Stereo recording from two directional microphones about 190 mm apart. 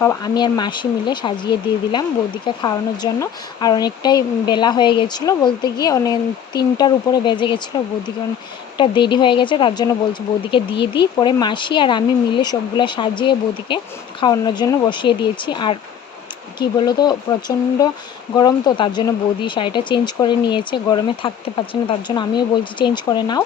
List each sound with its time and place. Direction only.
0.0 s speech: 15° left (ahead or behind)
8.8 s speech: 25° left (ahead or behind)
18.3 s speech: 20° left (ahead or behind)